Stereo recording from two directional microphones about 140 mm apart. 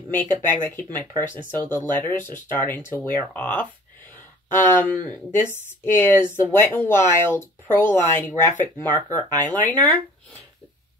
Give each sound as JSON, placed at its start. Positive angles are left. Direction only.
{"t": 0.1, "sound": "speech", "side_deg": 15}